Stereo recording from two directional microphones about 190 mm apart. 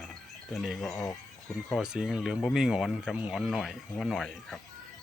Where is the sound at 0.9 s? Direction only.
15° left (ahead or behind).